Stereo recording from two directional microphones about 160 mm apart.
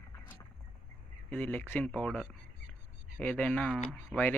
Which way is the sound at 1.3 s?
10° left (ahead or behind).